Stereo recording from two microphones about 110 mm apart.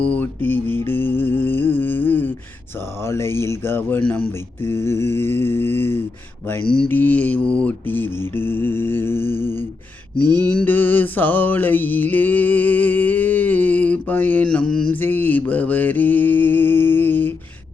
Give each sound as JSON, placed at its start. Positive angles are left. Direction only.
{"t": 0.0, "sound": "music", "side_deg": 15}
{"t": 3.0, "sound": "mantra", "side_deg": 25}